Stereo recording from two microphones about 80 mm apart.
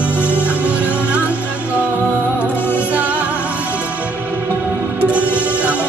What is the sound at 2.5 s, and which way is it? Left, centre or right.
Music, left.